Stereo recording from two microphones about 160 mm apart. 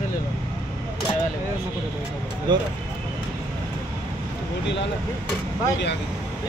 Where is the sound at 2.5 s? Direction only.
30° right (ahead or behind).